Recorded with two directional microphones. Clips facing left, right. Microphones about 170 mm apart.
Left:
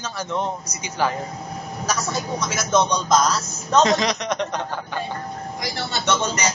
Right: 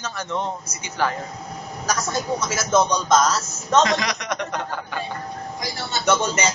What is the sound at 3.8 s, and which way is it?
Speech, 20° left (ahead or behind).